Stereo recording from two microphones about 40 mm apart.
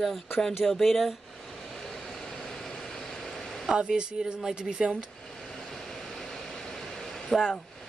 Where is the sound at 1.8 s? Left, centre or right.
Centre.